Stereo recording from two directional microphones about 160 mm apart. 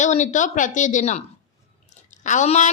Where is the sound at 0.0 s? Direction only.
50° left (ahead or behind).